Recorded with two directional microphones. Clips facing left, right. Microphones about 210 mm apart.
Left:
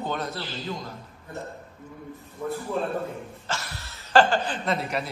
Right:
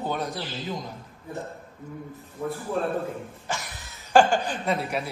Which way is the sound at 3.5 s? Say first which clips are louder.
Even; 15° right (ahead or behind).